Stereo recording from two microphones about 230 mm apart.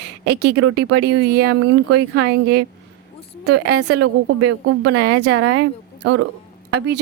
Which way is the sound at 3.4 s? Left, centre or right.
Right.